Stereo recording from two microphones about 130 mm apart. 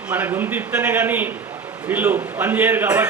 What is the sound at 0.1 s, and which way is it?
A man's voice, 15° right (ahead or behind).